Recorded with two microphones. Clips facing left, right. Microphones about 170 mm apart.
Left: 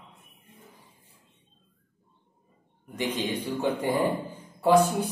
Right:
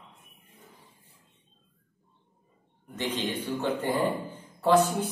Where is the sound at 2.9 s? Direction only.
10° left (ahead or behind).